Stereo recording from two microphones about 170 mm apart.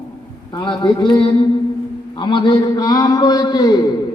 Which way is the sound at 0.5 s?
30° left (ahead or behind).